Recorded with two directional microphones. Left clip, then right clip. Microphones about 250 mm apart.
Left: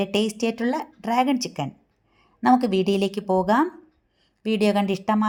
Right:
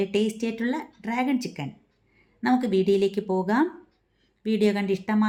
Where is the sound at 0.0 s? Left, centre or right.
Left.